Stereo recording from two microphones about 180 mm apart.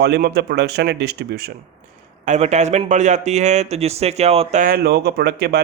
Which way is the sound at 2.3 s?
40° right (ahead or behind).